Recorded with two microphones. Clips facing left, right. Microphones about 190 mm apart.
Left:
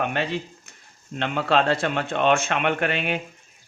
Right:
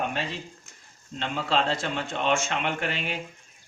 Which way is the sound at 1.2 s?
60° left (ahead or behind).